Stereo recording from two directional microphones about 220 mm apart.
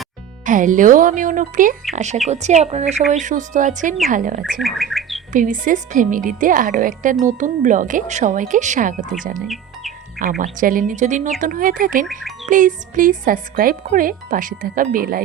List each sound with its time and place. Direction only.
0.4 s speech: 35° right (ahead or behind)
4.6 s bird: centre (ahead or behind)
5.3 s speech: 35° right (ahead or behind)